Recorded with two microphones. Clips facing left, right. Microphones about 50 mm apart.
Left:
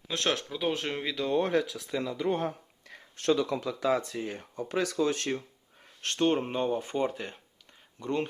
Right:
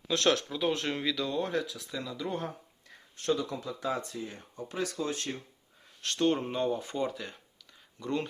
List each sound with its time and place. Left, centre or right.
0.1 s speech: left
0.5 s speech: centre
1.0 s speech: left
2.8 s speech: left
6.1 s speech: left